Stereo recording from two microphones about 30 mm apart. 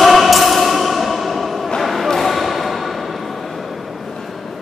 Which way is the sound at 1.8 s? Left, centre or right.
Centre.